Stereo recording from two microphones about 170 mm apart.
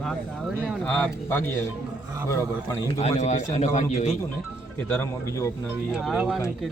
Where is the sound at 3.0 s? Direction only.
40° left (ahead or behind).